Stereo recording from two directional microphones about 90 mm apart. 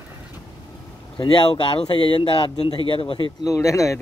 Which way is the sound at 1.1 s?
65° left (ahead or behind).